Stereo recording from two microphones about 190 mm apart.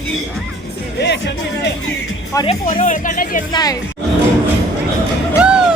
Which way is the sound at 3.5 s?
20° left (ahead or behind).